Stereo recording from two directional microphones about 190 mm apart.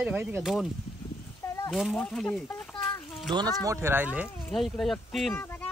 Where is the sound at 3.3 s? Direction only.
25° right (ahead or behind).